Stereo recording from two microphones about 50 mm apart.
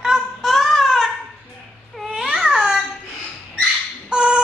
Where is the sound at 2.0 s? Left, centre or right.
Centre.